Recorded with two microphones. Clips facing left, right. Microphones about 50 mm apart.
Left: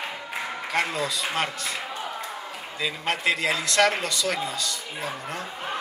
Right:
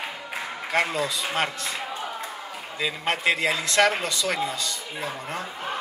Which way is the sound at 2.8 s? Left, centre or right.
Right.